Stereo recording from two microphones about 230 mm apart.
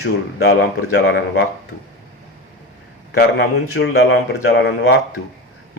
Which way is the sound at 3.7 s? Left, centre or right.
Left.